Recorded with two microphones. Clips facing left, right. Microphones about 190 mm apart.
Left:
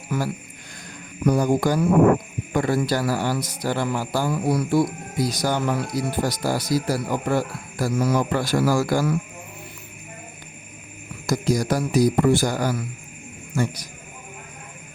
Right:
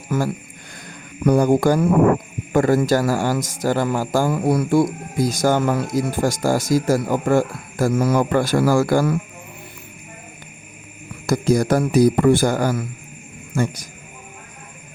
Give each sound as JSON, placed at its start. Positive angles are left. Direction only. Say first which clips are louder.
{"t": 0.1, "sound": "speech", "louder": "right 4 dB", "side_deg": -45}
{"t": 1.2, "sound": "speech", "louder": "right 4 dB", "side_deg": -60}
{"t": 11.3, "sound": "speech", "louder": "right 5 dB", "side_deg": -55}